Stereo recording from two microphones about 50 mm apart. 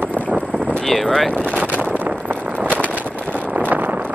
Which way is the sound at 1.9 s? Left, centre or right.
Right.